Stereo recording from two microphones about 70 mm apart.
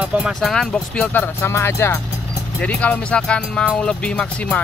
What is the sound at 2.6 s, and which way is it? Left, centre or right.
Speech, centre.